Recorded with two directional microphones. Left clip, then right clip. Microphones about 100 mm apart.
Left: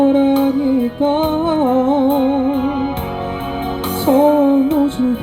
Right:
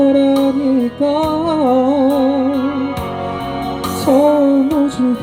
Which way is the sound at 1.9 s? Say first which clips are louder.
Right 1 dB; 45° left (ahead or behind).